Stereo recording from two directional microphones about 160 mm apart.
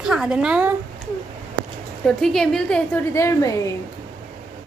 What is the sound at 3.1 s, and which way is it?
Speech, 20° left (ahead or behind).